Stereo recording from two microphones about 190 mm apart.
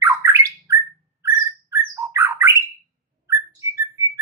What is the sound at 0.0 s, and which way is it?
Bird, 15° right (ahead or behind).